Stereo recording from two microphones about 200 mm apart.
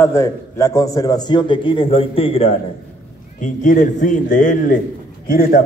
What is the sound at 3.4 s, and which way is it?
A man's voice, 40° left (ahead or behind).